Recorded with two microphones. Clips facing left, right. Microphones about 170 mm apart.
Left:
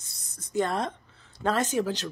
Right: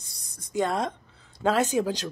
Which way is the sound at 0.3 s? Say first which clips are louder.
Right 1 dB; 10° right (ahead or behind).